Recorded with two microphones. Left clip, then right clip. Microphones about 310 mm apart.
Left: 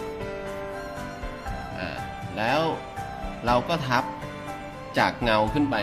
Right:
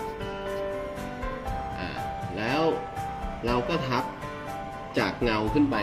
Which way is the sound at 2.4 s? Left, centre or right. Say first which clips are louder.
Left 2 dB; left.